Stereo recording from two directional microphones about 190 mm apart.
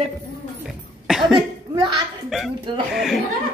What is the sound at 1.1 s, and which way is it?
Cough, centre (ahead or behind).